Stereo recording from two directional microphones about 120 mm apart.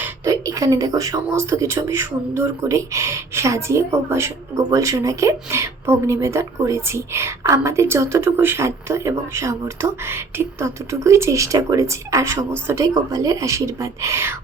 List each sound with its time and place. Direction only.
0.3 s speech: 25° right (ahead or behind)